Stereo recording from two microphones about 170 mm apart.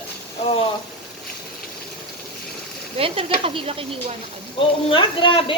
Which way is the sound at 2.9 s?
35° right (ahead or behind).